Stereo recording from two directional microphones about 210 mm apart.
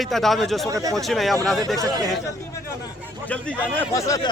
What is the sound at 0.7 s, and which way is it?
Speech, 15° right (ahead or behind).